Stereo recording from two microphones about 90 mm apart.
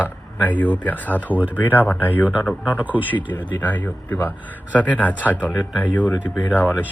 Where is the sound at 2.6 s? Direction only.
15° right (ahead or behind).